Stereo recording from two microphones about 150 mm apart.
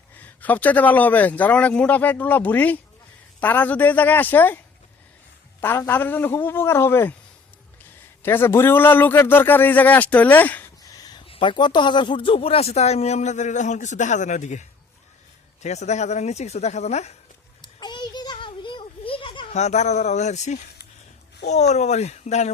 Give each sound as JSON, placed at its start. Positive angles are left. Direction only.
{"t": 0.2, "sound": "a man's voice", "side_deg": 10}
{"t": 8.2, "sound": "a man's voice", "side_deg": 15}
{"t": 10.9, "sound": "a sound", "side_deg": 25}
{"t": 11.3, "sound": "speech", "side_deg": 35}
{"t": 17.7, "sound": "a sound", "side_deg": 30}
{"t": 19.5, "sound": "speech", "side_deg": 50}
{"t": 21.7, "sound": "speech", "side_deg": 50}